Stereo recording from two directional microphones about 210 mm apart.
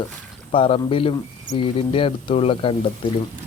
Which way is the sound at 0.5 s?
25° left (ahead or behind).